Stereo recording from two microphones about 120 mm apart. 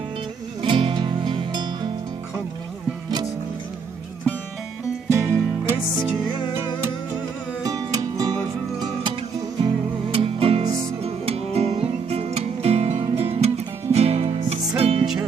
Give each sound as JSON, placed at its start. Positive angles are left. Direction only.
{"t": 0.6, "sound": "music", "side_deg": -45}
{"t": 5.1, "sound": "music", "side_deg": -25}
{"t": 6.3, "sound": "music", "side_deg": 40}
{"t": 7.6, "sound": "music", "side_deg": -30}
{"t": 9.6, "sound": "music", "side_deg": -50}
{"t": 15.0, "sound": "music", "side_deg": -5}